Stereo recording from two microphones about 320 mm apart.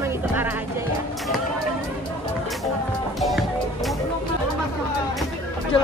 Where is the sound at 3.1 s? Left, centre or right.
Centre.